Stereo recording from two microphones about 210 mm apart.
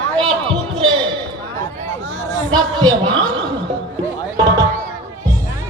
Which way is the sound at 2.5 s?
20° right (ahead or behind).